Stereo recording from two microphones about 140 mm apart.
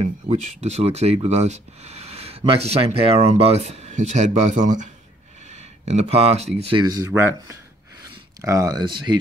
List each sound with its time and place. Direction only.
0.0 s speech: 50° right (ahead or behind)
7.1 s speech: 20° right (ahead or behind); by 9.2 s 35° right (ahead or behind)